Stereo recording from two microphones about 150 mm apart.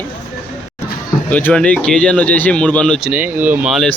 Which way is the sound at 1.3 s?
10° left (ahead or behind).